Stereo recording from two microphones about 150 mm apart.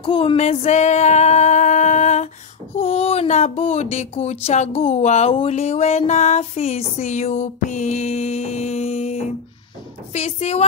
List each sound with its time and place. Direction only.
0.0 s music: 35° left (ahead or behind)
0.4 s female singing: 50° left (ahead or behind)
2.7 s a sound: 40° left (ahead or behind)